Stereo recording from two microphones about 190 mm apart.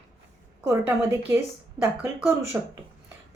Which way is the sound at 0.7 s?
15° right (ahead or behind).